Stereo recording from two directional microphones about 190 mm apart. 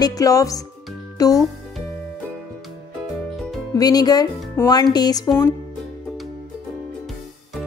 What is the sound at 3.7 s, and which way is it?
Speech, 20° left (ahead or behind).